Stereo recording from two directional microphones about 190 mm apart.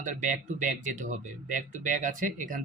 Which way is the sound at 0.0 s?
40° right (ahead or behind).